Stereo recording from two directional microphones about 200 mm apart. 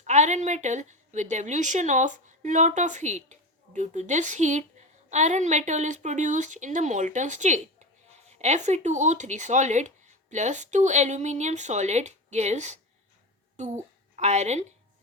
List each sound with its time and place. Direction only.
0.0 s a woman's voice: 35° right (ahead or behind)